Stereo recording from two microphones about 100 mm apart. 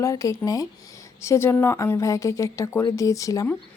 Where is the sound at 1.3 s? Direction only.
25° left (ahead or behind).